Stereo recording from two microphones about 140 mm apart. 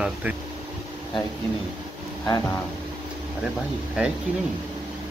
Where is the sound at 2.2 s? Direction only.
30° left (ahead or behind).